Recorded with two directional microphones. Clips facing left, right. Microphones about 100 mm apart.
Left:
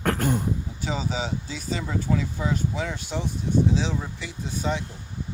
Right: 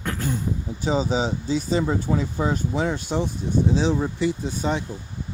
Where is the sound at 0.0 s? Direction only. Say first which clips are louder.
Left 3 dB; 55° left (ahead or behind).